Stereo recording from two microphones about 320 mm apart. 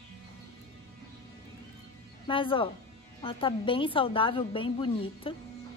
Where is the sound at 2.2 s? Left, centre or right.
Centre.